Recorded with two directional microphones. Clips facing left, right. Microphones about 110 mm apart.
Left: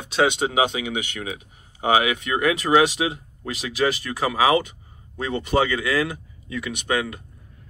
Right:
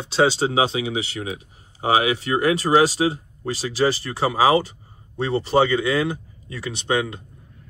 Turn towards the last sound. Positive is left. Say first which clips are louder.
# right 2 dB
turn(degrees=-25)  # may be behind; listen again after turning